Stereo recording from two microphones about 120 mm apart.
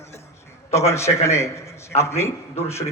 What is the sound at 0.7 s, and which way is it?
A man's voice, 25° left (ahead or behind).